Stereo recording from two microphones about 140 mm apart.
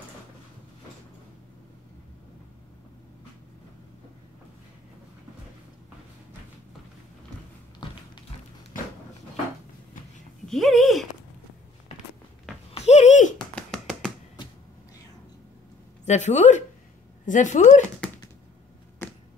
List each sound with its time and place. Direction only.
10.4 s speech: centre (ahead or behind)
12.8 s a sound: 55° left (ahead or behind)
13.6 s tap: 5° left (ahead or behind)
14.4 s vehicle: 35° left (ahead or behind)
16.1 s speech: 55° left (ahead or behind)